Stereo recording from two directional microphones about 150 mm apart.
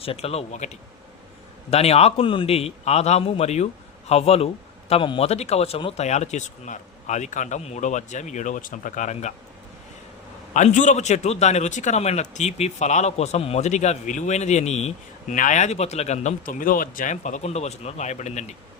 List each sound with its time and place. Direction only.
0.0 s a man's voice: 40° left (ahead or behind)
10.5 s a man's voice: 55° left (ahead or behind)